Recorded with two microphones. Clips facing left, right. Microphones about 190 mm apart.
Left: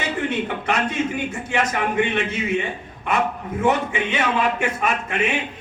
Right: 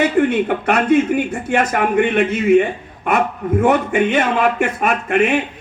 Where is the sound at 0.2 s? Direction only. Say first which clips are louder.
Right 9 dB; 55° right (ahead or behind).